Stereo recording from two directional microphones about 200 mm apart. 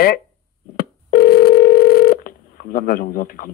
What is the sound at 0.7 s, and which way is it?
Telephone, 50° left (ahead or behind).